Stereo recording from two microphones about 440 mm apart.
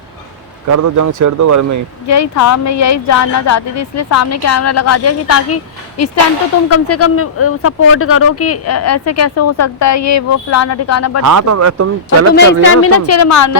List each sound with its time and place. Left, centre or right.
0.7 s speech: right
2.0 s speech: left
11.2 s speech: right
12.3 s speech: left